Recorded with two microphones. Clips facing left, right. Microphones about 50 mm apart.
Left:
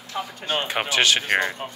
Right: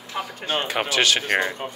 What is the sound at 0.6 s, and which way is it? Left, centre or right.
Speech, left.